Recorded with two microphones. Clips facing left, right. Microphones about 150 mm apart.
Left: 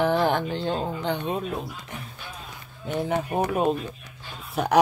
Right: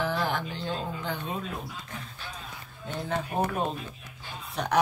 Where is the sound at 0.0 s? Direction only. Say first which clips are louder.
Left 7 dB; 55° left (ahead or behind).